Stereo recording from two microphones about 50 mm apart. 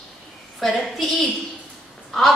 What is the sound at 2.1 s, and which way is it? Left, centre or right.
Crow, centre.